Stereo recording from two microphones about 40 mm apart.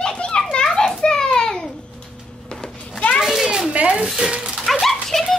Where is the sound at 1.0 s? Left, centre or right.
Left.